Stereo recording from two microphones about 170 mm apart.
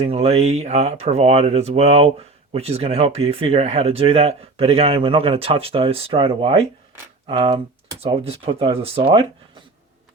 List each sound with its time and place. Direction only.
0.0 s speech: 35° right (ahead or behind)